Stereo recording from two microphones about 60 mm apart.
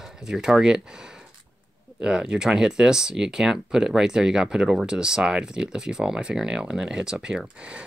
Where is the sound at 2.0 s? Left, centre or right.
Centre.